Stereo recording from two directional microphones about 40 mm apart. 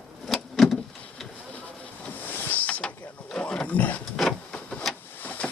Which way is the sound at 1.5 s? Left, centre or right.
Left.